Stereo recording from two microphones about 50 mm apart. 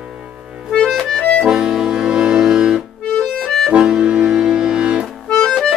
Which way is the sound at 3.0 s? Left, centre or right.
Centre.